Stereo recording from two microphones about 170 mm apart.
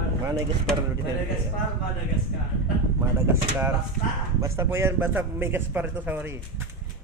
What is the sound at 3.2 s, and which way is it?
Speech, 15° right (ahead or behind).